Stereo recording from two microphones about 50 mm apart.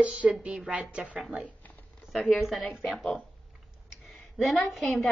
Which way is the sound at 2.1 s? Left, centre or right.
Centre.